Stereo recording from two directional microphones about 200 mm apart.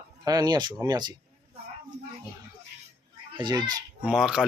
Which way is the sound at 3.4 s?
20° right (ahead or behind).